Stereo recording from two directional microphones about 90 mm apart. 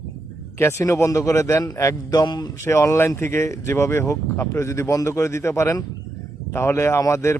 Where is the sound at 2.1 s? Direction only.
50° left (ahead or behind).